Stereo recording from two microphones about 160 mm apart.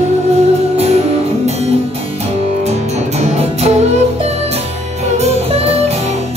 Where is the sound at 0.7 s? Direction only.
40° right (ahead or behind).